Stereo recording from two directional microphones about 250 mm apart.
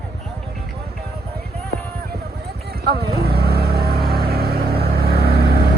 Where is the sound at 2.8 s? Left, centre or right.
Right.